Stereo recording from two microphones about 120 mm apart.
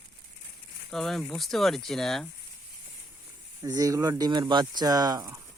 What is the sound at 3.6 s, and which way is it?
Speech, 30° right (ahead or behind).